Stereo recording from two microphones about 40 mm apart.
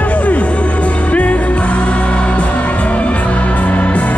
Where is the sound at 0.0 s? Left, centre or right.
Left.